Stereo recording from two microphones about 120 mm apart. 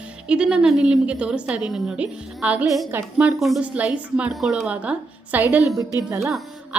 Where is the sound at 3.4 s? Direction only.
Centre (ahead or behind); by 6.2 s 25° right (ahead or behind).